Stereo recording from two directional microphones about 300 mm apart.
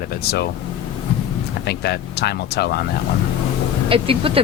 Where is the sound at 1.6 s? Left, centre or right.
Left.